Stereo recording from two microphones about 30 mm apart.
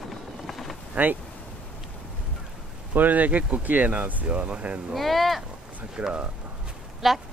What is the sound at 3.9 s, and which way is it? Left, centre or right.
Speech, right.